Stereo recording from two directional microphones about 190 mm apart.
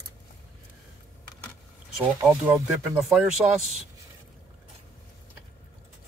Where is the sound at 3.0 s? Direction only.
5° right (ahead or behind).